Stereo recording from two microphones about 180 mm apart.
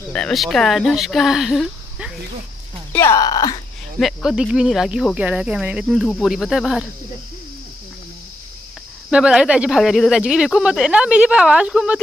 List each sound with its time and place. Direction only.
0.1 s speech: 5° left (ahead or behind)
2.9 s speech: 15° left (ahead or behind)
4.0 s cricket: centre (ahead or behind)
9.1 s cricket: 5° right (ahead or behind)